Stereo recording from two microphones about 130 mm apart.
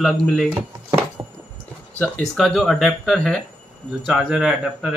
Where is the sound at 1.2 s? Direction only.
30° right (ahead or behind).